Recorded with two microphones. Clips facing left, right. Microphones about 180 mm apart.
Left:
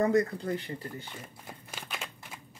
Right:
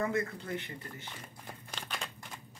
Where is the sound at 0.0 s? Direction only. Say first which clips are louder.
Left 7 dB; 35° left (ahead or behind).